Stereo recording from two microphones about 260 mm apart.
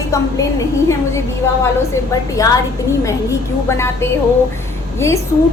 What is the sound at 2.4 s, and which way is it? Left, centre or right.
A woman's voice, centre.